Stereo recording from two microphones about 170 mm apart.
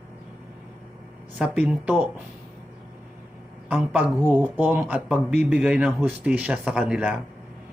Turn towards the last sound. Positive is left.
turn(degrees=-5)  # may be behind; listen again after turning